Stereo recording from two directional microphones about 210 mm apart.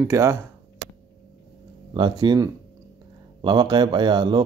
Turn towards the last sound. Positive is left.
turn(degrees=-20)  # may be behind; listen again after turning